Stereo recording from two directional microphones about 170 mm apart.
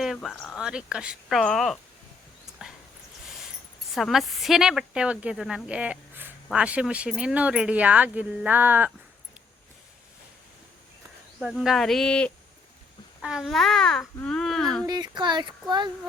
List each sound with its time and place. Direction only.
0.0 s speech: centre (ahead or behind)
3.9 s speech: centre (ahead or behind)
11.3 s speech: 5° right (ahead or behind)
14.8 s speech: 25° right (ahead or behind)